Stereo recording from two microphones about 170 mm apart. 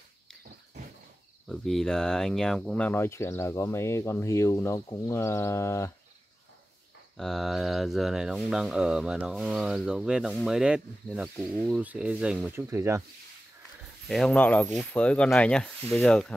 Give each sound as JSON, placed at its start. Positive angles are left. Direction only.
{"t": 1.5, "sound": "speech", "side_deg": 0}
{"t": 7.2, "sound": "speech", "side_deg": 0}
{"t": 14.0, "sound": "speech", "side_deg": 0}